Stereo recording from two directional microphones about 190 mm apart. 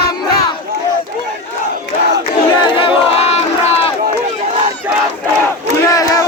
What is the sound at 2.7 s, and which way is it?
Crowd, 30° left (ahead or behind).